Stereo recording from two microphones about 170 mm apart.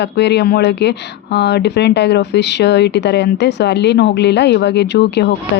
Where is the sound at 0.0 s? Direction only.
85° left.